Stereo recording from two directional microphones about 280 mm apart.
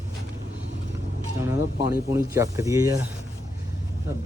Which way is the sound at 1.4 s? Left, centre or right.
Centre.